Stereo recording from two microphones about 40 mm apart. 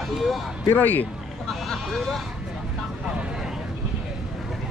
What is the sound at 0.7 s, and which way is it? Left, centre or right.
Speech, left.